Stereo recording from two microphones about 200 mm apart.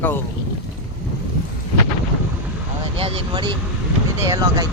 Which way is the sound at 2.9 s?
30° right (ahead or behind).